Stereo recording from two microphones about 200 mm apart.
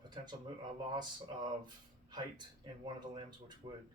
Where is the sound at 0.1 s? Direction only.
20° right (ahead or behind).